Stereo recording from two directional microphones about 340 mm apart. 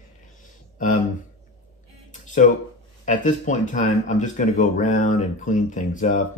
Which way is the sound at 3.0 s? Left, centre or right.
Left.